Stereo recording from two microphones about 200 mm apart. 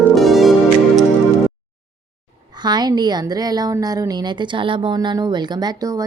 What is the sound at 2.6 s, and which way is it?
Speech, 20° right (ahead or behind).